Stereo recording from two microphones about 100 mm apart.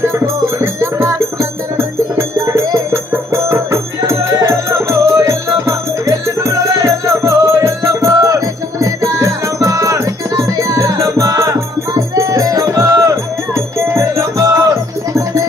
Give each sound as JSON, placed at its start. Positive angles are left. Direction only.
{"t": 0.6, "sound": "music", "side_deg": -25}